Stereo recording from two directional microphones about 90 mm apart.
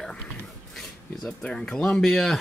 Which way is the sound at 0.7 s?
5° left (ahead or behind).